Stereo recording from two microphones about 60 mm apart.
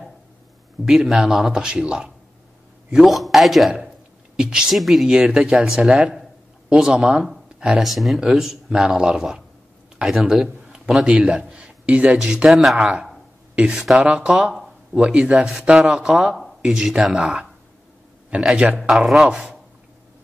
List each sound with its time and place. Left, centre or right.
0.8 s speech: centre
2.9 s a man's voice: centre
5.1 s a man's voice: centre
12.4 s a man's voice: centre
12.7 s speech: centre
13.7 s a man's voice: centre
13.9 s speech: centre